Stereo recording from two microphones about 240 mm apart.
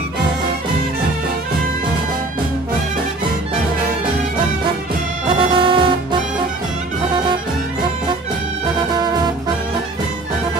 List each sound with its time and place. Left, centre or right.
5.3 s music: right
9.0 s music: centre